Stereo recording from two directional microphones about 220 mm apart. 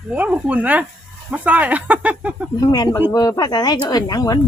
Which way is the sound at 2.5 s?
20° left (ahead or behind).